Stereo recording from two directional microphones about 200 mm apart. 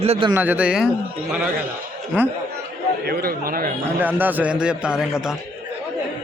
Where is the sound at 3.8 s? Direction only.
10° right (ahead or behind).